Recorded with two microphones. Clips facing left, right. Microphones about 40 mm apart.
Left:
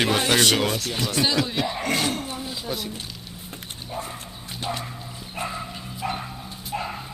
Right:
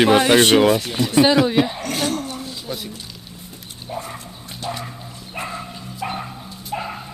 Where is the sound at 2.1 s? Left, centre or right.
Centre.